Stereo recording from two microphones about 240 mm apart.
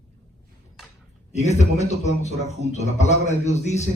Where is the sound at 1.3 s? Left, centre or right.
Left.